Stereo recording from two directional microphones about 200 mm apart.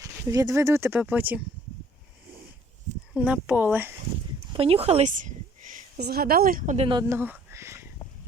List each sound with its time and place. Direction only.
0.0 s speech: 15° right (ahead or behind)
3.2 s speech: 5° right (ahead or behind)
4.5 s a woman's voice: 30° right (ahead or behind)
7.1 s a sound: 10° right (ahead or behind)